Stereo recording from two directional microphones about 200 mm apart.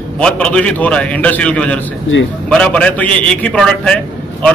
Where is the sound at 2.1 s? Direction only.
65° left (ahead or behind).